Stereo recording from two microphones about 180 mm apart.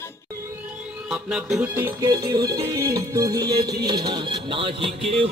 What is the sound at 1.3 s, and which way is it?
Music, 5° right (ahead or behind).